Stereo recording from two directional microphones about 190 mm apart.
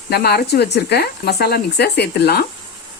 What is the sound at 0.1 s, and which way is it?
Speech, 55° left (ahead or behind).